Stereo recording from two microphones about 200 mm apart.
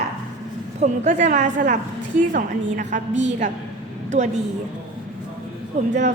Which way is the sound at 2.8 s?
40° right (ahead or behind).